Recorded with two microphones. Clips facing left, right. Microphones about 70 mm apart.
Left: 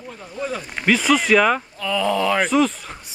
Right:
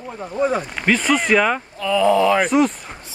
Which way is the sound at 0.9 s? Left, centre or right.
Centre.